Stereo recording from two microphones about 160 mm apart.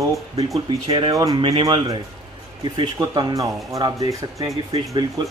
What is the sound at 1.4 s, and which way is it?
Speech, 35° right (ahead or behind).